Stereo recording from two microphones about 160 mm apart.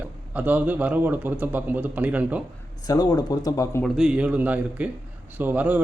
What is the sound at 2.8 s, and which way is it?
Speech, 25° left (ahead or behind).